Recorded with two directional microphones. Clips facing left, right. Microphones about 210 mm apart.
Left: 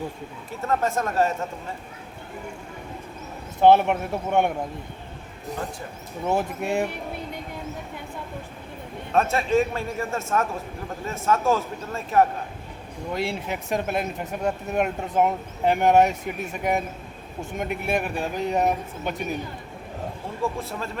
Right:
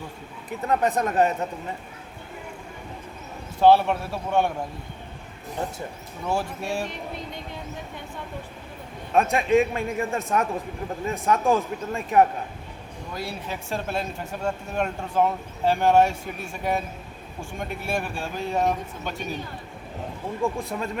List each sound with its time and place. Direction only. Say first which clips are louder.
0.7 s a man's voice: right 1 dB; 15° right (ahead or behind)
3.6 s speech: left 1 dB; 20° left (ahead or behind)
6.2 s speech: left 3 dB; 20° left (ahead or behind)
9.1 s a man's voice: right 1 dB; 15° right (ahead or behind)
13.1 s speech: left 4 dB; 25° left (ahead or behind)
20.4 s a man's voice: right 1 dB; 15° right (ahead or behind)